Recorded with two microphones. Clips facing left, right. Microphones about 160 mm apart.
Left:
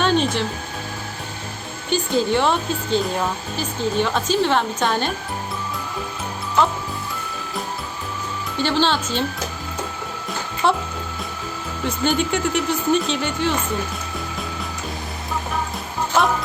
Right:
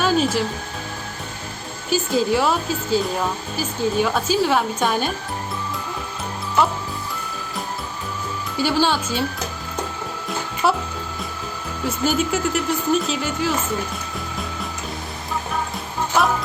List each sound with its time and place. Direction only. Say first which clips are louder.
0.0 s music: even; 5° right (ahead or behind)
1.9 s speech: even; 5° right (ahead or behind)
8.5 s speech: even; 10° right (ahead or behind)
10.2 s music: even; 5° right (ahead or behind)
11.9 s speech: even; 5° right (ahead or behind)